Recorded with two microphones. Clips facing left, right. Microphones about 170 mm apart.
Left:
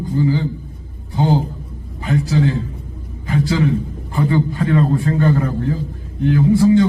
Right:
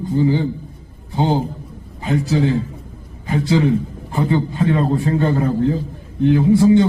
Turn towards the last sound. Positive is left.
turn(degrees=-20)  # may be behind; listen again after turning